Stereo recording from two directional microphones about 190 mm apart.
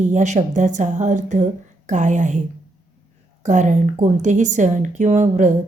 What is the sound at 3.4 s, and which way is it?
Speech, 40° right (ahead or behind).